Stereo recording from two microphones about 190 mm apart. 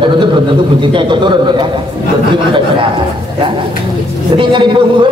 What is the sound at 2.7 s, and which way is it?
A man's voice, 25° right (ahead or behind).